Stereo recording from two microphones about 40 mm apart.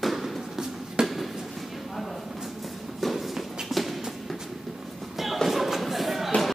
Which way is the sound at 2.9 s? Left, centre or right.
Centre.